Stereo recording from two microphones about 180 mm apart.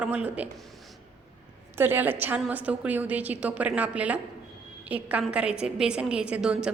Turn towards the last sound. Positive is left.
turn(degrees=-5)  # may be behind; listen again after turning